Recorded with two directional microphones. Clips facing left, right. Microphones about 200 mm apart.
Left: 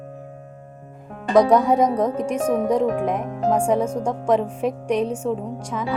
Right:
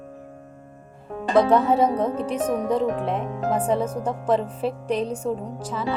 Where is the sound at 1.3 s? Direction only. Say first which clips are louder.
Left 2 dB; 15° left (ahead or behind).